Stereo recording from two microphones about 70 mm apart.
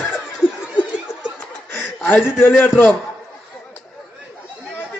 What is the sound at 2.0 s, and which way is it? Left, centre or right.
Speech, left.